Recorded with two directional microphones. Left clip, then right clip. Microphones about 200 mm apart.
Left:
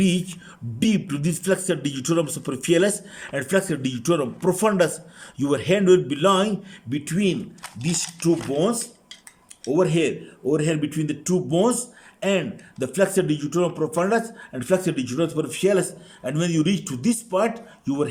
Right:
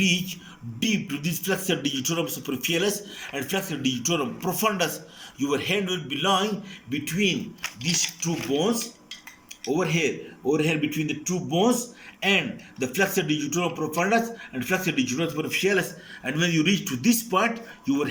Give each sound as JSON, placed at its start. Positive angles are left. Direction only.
{"t": 0.8, "sound": "speech", "side_deg": 45}
{"t": 9.7, "sound": "speech", "side_deg": 40}